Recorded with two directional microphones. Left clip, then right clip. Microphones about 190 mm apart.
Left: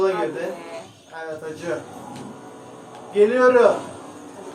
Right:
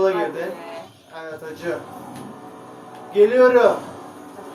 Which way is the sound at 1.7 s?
15° right (ahead or behind).